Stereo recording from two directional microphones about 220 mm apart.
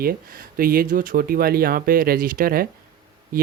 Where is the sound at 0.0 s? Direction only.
40° right (ahead or behind).